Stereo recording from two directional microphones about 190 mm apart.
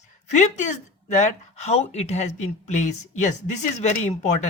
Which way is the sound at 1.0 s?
40° left (ahead or behind).